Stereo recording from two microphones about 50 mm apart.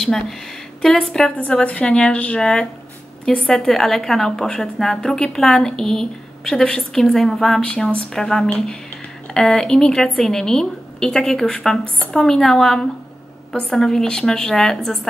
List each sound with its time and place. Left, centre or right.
0.0 s a woman's voice: centre
1.3 s a woman's voice: left; by 7.6 s centre
7.6 s a woman's voice: centre